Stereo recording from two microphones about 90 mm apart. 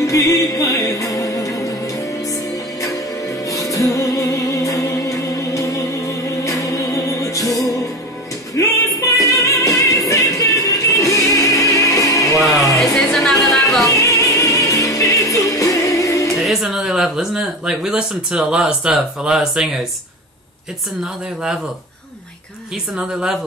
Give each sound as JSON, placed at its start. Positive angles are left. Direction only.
{"t": 0.0, "sound": "music", "side_deg": 35}
{"t": 12.7, "sound": "music", "side_deg": 0}
{"t": 13.8, "sound": "music", "side_deg": 35}
{"t": 16.3, "sound": "speech", "side_deg": 0}
{"t": 21.0, "sound": "speech", "side_deg": -10}
{"t": 22.9, "sound": "speech", "side_deg": -5}